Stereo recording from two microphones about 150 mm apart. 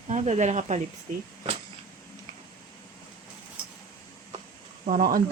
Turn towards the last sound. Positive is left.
turn(degrees=-65)  # may be behind; listen again after turning